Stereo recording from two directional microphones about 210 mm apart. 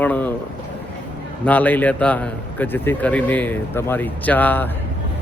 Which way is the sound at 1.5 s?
5° left (ahead or behind).